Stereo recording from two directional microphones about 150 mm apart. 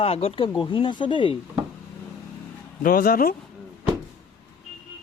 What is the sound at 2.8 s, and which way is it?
Speech, 70° left (ahead or behind).